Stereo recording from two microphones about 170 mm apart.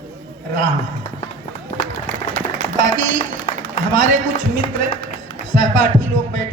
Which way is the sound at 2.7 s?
50° right (ahead or behind).